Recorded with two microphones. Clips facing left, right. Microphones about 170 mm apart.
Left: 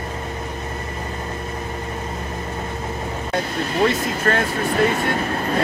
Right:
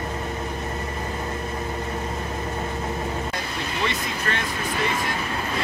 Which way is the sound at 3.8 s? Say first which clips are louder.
Left 9 dB; 45° left (ahead or behind).